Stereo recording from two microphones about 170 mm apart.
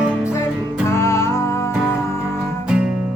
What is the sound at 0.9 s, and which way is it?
Music, 15° left (ahead or behind).